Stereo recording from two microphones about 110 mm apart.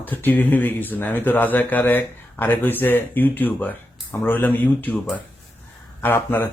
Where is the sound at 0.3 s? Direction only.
15° left (ahead or behind).